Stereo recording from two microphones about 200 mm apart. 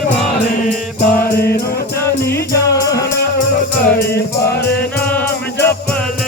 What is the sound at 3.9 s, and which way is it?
Music, 50° left (ahead or behind).